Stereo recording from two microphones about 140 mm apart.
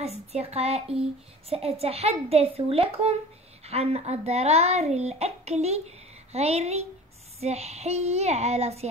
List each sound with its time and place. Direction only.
0.0 s a child's voice: 50° right (ahead or behind)